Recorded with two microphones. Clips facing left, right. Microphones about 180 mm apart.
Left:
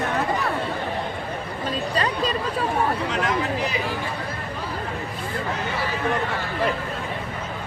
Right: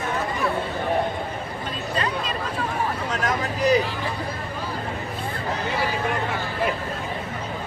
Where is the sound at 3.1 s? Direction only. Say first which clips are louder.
Left 2 dB; 45° right (ahead or behind).